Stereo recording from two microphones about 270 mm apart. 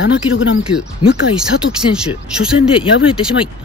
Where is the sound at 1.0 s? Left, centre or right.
Left.